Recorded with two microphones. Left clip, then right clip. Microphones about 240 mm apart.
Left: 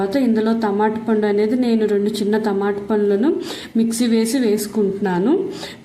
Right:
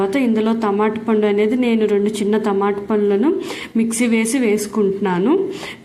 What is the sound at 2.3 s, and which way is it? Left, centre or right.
Speech, centre.